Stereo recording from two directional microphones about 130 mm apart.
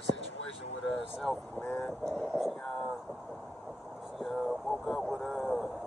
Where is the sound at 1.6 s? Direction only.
10° left (ahead or behind).